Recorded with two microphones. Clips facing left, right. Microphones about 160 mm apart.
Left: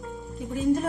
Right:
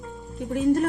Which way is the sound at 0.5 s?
70° right (ahead or behind).